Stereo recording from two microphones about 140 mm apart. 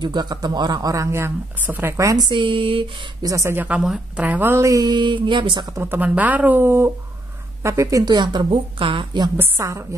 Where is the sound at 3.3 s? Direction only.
20° right (ahead or behind).